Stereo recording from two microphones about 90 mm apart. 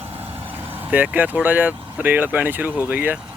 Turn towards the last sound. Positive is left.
turn(degrees=-20)  # may be behind; listen again after turning